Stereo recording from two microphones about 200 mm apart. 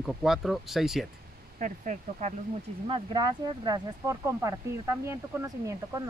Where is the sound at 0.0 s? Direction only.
Centre (ahead or behind).